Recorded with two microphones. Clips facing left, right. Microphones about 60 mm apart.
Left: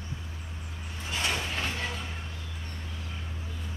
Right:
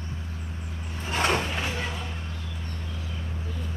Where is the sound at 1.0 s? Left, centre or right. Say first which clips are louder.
Right 7 dB; right.